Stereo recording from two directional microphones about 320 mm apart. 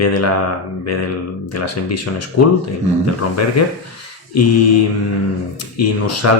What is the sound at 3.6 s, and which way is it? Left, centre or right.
Speech, left.